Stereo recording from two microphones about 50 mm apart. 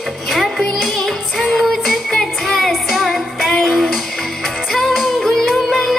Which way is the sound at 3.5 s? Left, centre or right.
Centre.